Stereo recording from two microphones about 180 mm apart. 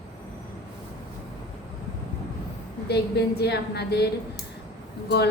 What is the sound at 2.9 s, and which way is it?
A woman's voice, 65° left (ahead or behind).